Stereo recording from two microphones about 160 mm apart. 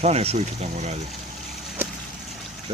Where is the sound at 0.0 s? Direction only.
40° right (ahead or behind).